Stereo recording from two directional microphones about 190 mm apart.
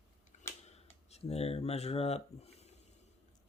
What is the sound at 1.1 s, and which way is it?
Speech, 35° left (ahead or behind).